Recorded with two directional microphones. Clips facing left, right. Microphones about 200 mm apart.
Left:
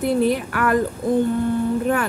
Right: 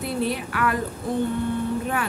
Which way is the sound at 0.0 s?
45° left (ahead or behind).